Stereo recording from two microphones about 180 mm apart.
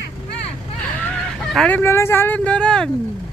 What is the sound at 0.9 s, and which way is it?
Speech, 5° left (ahead or behind).